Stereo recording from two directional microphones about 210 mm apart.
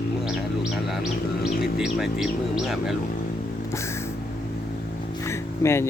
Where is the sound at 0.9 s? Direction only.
Centre (ahead or behind).